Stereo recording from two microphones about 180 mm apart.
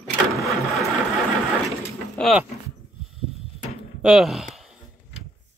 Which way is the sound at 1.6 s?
Centre (ahead or behind).